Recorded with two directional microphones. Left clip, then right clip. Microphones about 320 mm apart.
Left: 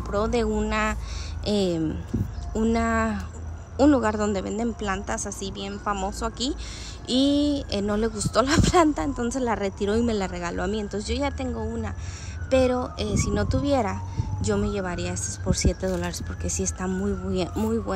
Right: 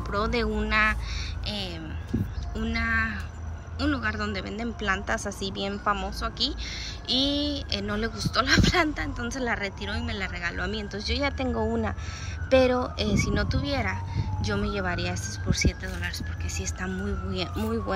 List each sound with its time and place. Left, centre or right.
0.1 s speech: centre
2.5 s speech: centre